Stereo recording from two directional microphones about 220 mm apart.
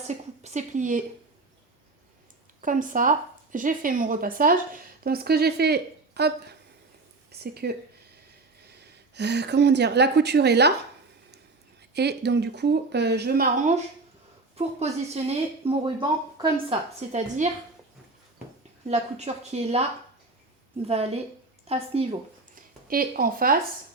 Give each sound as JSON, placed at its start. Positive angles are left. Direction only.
{"t": 0.1, "sound": "speech", "side_deg": -30}
{"t": 2.6, "sound": "speech", "side_deg": -35}
{"t": 11.9, "sound": "speech", "side_deg": -50}
{"t": 14.5, "sound": "speech", "side_deg": -30}
{"t": 17.1, "sound": "speech", "side_deg": -30}
{"t": 18.9, "sound": "speech", "side_deg": -30}
{"t": 20.8, "sound": "a woman's voice", "side_deg": -30}
{"t": 22.5, "sound": "a woman's voice", "side_deg": -40}